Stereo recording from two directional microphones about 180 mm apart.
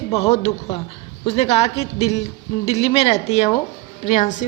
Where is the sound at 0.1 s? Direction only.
35° left (ahead or behind).